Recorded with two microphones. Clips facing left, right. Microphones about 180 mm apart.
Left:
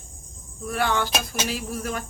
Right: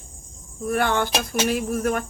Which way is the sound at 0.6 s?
50° right (ahead or behind).